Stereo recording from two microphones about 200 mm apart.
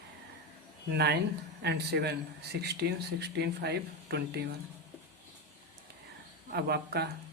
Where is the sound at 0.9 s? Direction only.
55° right (ahead or behind).